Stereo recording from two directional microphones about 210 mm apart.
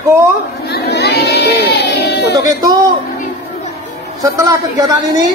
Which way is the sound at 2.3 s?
20° right (ahead or behind).